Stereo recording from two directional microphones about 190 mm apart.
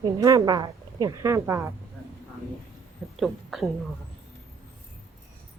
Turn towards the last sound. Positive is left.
turn(degrees=0)  # may be behind; listen again after turning